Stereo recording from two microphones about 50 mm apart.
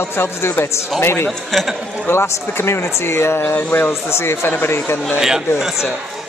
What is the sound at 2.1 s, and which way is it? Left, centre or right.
Speech, left.